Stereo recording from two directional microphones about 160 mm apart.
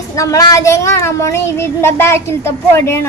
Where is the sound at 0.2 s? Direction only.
20° left (ahead or behind).